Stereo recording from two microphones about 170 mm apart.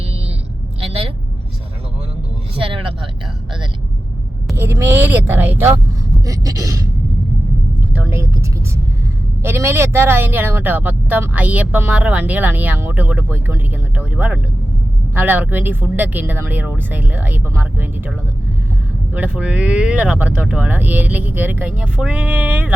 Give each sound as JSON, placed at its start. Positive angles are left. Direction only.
{"t": 0.8, "sound": "vehicle", "side_deg": -35}
{"t": 2.6, "sound": "vehicle", "side_deg": -30}
{"t": 4.5, "sound": "speech", "side_deg": -15}
{"t": 6.2, "sound": "a sound", "side_deg": -20}
{"t": 7.9, "sound": "vehicle", "side_deg": -15}
{"t": 9.4, "sound": "speech", "side_deg": -15}
{"t": 19.1, "sound": "speech", "side_deg": -10}